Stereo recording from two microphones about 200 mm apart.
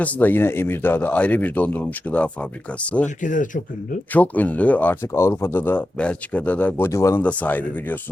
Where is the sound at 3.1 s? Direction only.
40° left (ahead or behind).